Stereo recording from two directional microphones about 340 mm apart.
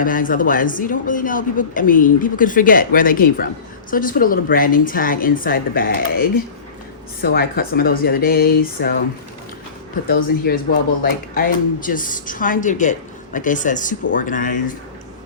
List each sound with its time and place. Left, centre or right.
0.0 s speech: left
10.4 s speech: left